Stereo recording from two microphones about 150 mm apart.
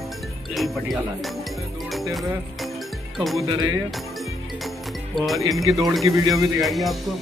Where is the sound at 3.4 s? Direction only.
25° right (ahead or behind).